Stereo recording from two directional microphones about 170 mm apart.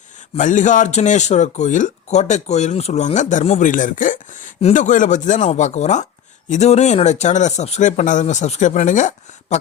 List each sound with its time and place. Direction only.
0.3 s speech: 45° left (ahead or behind)